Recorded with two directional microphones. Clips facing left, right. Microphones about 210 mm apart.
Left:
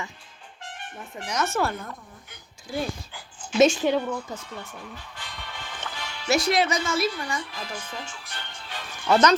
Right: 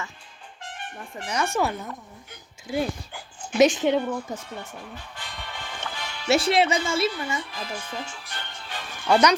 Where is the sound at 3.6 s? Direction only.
20° right (ahead or behind).